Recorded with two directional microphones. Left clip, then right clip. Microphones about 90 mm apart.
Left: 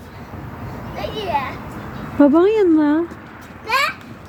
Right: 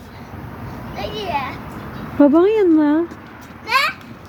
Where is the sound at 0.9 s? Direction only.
25° left (ahead or behind).